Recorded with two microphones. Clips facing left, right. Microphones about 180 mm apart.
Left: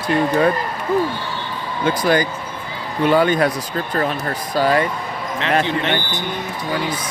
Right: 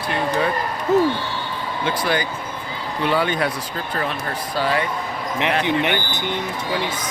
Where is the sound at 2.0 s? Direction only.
45° left (ahead or behind).